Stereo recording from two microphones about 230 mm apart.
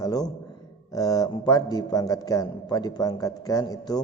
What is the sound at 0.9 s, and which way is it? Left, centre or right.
A man's voice, centre.